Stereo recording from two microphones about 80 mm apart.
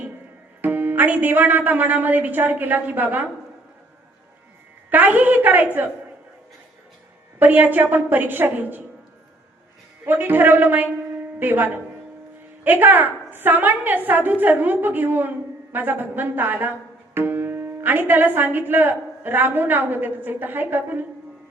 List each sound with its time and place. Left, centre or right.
0.6 s speech: right
4.9 s speech: right
7.3 s speech: right
10.1 s speech: right